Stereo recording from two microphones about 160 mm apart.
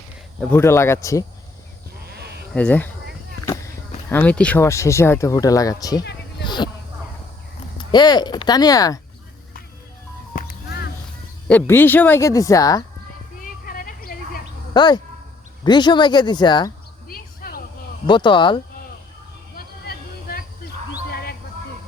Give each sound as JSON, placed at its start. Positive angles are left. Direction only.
{"t": 0.5, "sound": "speech", "side_deg": 15}
{"t": 2.1, "sound": "sheep", "side_deg": -90}
{"t": 2.6, "sound": "speech", "side_deg": 10}
{"t": 4.1, "sound": "speech", "side_deg": 10}
{"t": 7.8, "sound": "speech", "side_deg": 25}
{"t": 10.3, "sound": "music", "side_deg": 90}
{"t": 11.4, "sound": "speech", "side_deg": 10}
{"t": 13.4, "sound": "a sound", "side_deg": 60}
{"t": 14.7, "sound": "speech", "side_deg": 25}
{"t": 17.1, "sound": "a sound", "side_deg": 70}
{"t": 18.0, "sound": "speech", "side_deg": 30}
{"t": 19.5, "sound": "a sound", "side_deg": 70}
{"t": 21.1, "sound": "owl", "side_deg": 80}